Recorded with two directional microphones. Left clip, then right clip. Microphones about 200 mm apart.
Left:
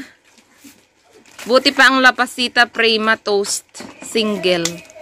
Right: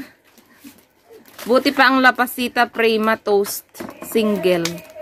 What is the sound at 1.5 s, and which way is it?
Speech, centre (ahead or behind).